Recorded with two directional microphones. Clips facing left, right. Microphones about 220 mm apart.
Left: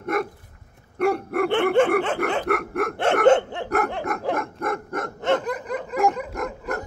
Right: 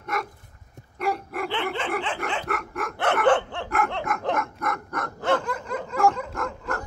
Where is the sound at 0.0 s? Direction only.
55° left (ahead or behind).